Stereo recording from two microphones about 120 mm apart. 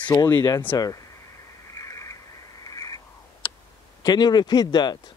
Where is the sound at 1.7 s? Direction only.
25° left (ahead or behind).